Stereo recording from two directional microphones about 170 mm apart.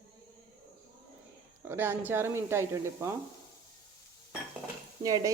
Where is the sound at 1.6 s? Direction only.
15° right (ahead or behind).